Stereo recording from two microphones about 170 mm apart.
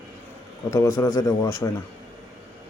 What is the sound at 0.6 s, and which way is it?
Speech, 15° left (ahead or behind).